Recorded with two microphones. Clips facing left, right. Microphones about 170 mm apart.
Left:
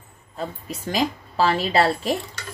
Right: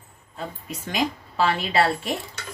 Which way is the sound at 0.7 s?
35° left (ahead or behind).